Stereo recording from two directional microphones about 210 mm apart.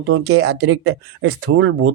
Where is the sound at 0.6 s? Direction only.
60° right (ahead or behind).